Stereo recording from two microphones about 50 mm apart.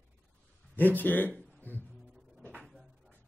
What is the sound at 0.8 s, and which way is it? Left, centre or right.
Speech, left.